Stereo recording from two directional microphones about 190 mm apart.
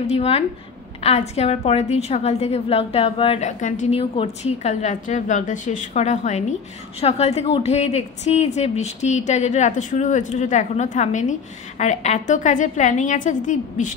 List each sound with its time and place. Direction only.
0.0 s a woman's voice: 30° left (ahead or behind)